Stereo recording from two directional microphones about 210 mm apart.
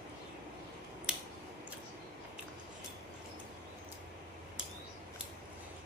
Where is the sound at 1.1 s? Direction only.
5° right (ahead or behind).